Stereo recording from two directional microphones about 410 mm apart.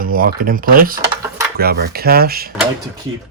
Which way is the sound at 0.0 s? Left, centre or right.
Centre.